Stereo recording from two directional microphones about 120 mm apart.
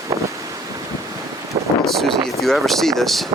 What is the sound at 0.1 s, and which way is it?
Wind noise, 25° right (ahead or behind).